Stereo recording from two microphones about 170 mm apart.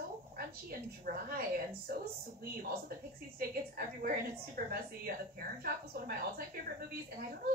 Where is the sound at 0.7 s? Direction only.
60° right (ahead or behind).